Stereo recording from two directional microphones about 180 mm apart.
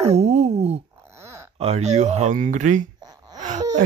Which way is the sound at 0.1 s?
35° right (ahead or behind).